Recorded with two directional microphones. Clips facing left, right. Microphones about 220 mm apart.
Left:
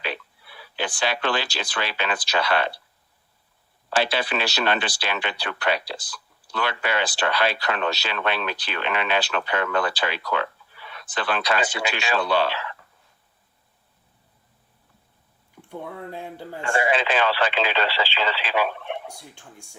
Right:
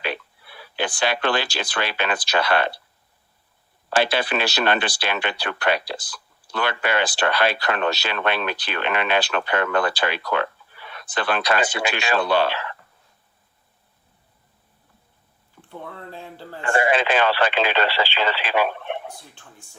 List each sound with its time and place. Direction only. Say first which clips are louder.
0.0 s speech: right 3 dB; 55° right (ahead or behind)
3.8 s speech: right 3 dB; 55° right (ahead or behind)
15.7 s speech: left 3 dB; 15° left (ahead or behind)
16.6 s speech: right 3 dB; 55° right (ahead or behind)